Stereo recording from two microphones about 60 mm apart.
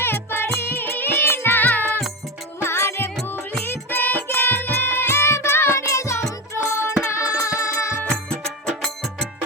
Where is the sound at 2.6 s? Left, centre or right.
Left.